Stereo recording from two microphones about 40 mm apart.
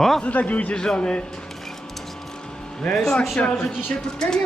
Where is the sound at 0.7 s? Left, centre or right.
Centre.